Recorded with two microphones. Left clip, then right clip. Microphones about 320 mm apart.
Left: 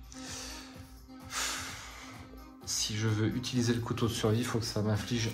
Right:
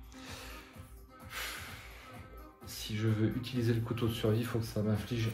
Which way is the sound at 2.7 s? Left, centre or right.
Centre.